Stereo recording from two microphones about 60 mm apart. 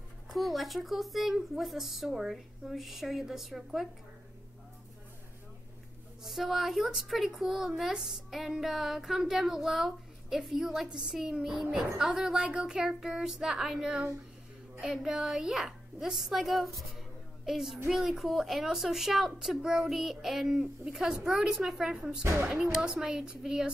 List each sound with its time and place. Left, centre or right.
0.3 s a woman's voice: centre
6.2 s a woman's voice: centre